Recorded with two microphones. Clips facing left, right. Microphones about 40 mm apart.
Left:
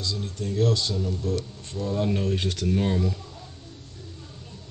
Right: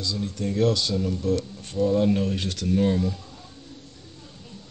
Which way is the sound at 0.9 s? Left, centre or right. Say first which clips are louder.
Right 3 dB; right.